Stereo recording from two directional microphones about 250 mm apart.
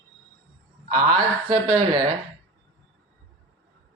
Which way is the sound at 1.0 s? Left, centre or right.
Right.